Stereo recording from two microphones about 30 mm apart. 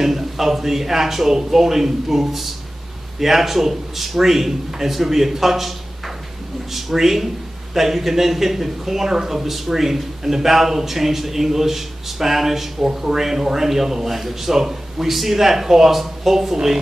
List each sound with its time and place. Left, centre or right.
0.0 s a man's voice: centre